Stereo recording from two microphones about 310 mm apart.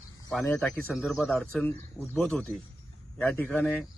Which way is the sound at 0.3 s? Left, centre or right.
Centre.